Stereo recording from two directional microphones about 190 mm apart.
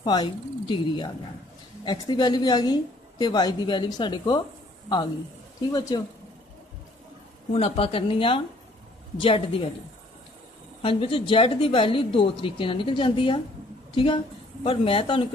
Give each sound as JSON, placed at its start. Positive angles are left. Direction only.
{"t": 0.0, "sound": "speech", "side_deg": 20}
{"t": 5.7, "sound": "speech", "side_deg": 20}
{"t": 7.5, "sound": "speech", "side_deg": 30}
{"t": 10.8, "sound": "speech", "side_deg": 30}